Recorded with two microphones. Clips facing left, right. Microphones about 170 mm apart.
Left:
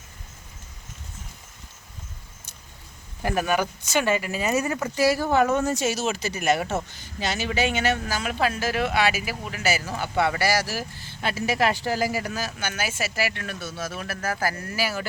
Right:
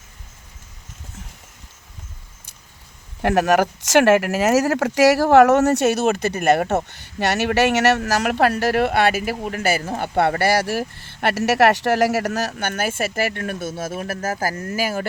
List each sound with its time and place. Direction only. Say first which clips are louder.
3.2 s speech: right 7 dB; 75° right (ahead or behind); by 15.0 s 45° right (ahead or behind)